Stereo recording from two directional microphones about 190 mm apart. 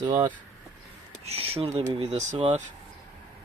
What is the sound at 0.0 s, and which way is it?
Speech, 20° right (ahead or behind).